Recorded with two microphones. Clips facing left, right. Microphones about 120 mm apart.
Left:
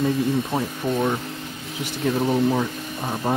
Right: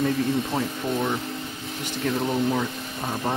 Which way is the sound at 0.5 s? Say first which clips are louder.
Left 2 dB; 15° left (ahead or behind).